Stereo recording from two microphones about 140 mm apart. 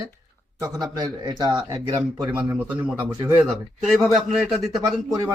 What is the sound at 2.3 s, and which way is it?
Speech, 15° right (ahead or behind).